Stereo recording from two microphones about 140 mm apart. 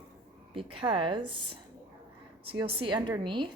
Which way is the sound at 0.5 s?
40° right (ahead or behind).